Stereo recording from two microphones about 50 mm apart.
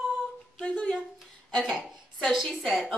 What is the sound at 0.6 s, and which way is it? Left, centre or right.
Speech, centre.